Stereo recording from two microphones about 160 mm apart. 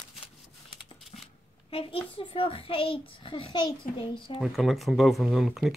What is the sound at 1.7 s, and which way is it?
A child's voice, 35° left (ahead or behind).